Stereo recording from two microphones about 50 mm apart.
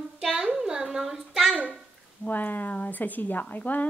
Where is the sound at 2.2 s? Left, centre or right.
Left.